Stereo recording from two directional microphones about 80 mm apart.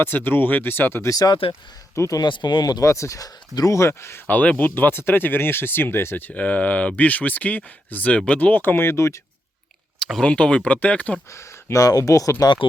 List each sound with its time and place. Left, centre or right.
0.0 s speech: left
1.0 s speech: left
2.2 s speech: left
2.6 s speech: left
4.4 s speech: left
10.0 s speech: centre
11.3 s speech: left
12.4 s speech: left